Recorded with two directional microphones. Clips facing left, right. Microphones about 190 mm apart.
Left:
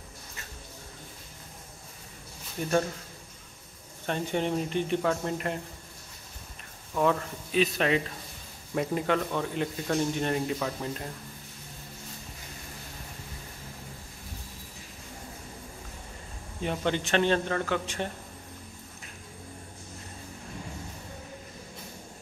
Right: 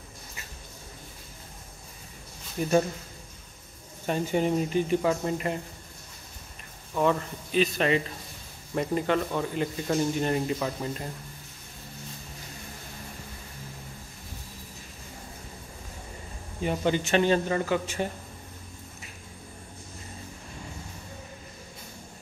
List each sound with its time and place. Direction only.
2.6 s a man's voice: 5° right (ahead or behind)
4.0 s a man's voice: 5° right (ahead or behind)
6.9 s a man's voice: centre (ahead or behind)
16.6 s a man's voice: 5° right (ahead or behind)